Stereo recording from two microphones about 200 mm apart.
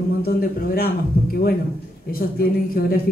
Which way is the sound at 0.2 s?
45° left (ahead or behind).